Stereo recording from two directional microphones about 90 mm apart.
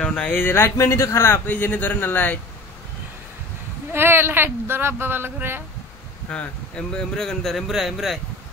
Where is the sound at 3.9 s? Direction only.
25° right (ahead or behind).